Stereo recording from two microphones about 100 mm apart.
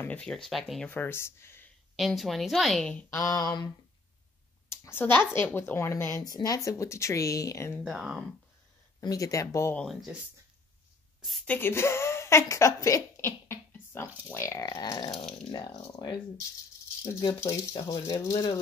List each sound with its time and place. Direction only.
0.2 s a woman's voice: 5° left (ahead or behind)
0.8 s speech: 20° left (ahead or behind)
2.0 s a woman's voice: centre (ahead or behind)
3.1 s speech: 30° left (ahead or behind)
4.6 s speech: 25° left (ahead or behind)
6.2 s speech: 40° left (ahead or behind)
7.8 s a woman's voice: 5° right (ahead or behind)
9.0 s speech: 35° left (ahead or behind)
11.4 s speech: 20° left (ahead or behind)
14.8 s a sound: 45° left (ahead or behind)
15.9 s speech: 40° left (ahead or behind)
17.0 s a sound: 45° left (ahead or behind)
17.5 s speech: 35° left (ahead or behind)